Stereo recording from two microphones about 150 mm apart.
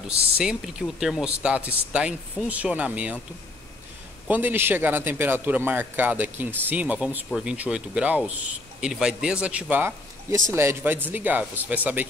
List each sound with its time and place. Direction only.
0.4 s a man's voice: 5° right (ahead or behind)
4.3 s a man's voice: 10° right (ahead or behind)